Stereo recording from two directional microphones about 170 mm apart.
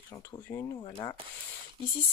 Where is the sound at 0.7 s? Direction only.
25° left (ahead or behind).